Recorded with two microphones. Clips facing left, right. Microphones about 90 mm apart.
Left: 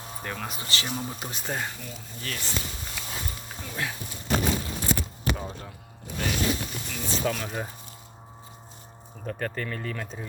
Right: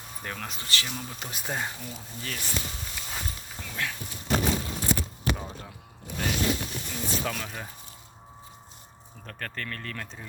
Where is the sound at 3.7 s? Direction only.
20° left (ahead or behind).